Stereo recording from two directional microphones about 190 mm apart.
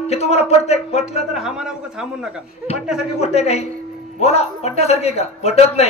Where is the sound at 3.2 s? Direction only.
35° left (ahead or behind).